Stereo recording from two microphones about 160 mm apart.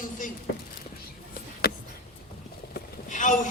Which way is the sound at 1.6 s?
70° left (ahead or behind).